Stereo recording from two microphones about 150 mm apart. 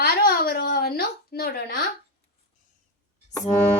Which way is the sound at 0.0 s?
90° left.